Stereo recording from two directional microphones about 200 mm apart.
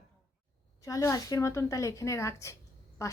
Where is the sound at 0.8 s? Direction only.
15° left (ahead or behind).